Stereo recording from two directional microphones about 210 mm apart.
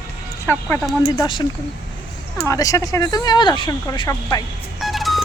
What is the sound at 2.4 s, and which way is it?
Speech, 15° left (ahead or behind).